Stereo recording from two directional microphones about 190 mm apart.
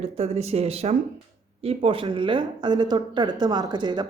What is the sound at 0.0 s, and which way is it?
Speech, 35° right (ahead or behind).